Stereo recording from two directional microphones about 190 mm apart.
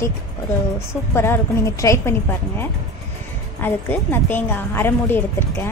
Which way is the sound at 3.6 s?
10° left (ahead or behind).